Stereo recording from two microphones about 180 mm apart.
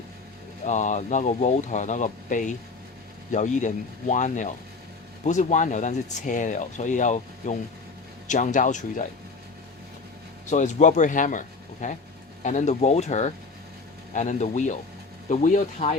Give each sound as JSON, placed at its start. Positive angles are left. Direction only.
{"t": 0.6, "sound": "speech", "side_deg": 40}
{"t": 10.4, "sound": "speech", "side_deg": 40}